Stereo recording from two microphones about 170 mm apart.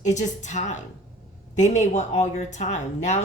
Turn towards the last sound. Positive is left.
turn(degrees=45)  # may be behind; listen again after turning